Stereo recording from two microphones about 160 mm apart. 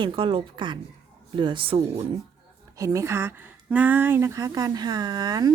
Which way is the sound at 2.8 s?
20° right (ahead or behind).